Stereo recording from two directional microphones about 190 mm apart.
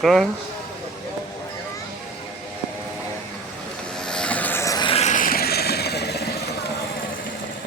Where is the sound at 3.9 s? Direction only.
5° left (ahead or behind); by 6.3 s 60° left (ahead or behind).